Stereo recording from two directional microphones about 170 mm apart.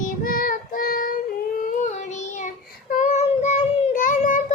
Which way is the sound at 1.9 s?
45° left (ahead or behind).